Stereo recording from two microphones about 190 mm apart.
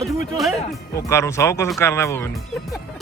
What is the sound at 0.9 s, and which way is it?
Speech, 15° left (ahead or behind).